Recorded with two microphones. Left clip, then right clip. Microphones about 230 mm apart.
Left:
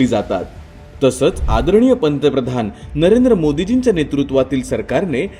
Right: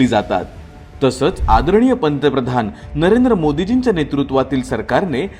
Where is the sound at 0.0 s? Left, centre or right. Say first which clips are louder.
Right 1 dB; centre.